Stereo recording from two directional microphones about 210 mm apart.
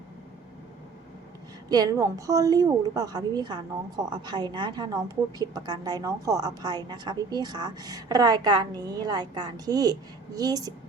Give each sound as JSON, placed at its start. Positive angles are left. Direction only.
{"t": 1.7, "sound": "a woman's voice", "side_deg": -15}